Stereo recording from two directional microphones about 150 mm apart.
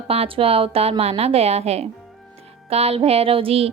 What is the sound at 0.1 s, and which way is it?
Speech, 40° right (ahead or behind).